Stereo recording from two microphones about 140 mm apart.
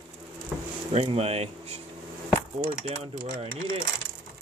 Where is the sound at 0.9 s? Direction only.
50° right (ahead or behind).